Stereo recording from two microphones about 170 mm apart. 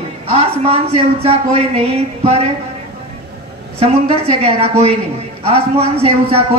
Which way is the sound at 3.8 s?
35° right (ahead or behind).